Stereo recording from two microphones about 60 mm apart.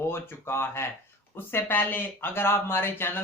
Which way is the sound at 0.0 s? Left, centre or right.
Left.